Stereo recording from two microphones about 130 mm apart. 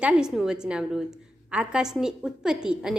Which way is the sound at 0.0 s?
5° right (ahead or behind).